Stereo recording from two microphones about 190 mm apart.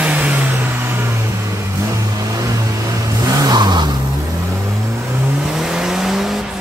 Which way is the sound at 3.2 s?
20° right (ahead or behind).